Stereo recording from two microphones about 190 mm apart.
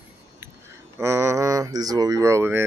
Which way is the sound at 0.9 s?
15° right (ahead or behind).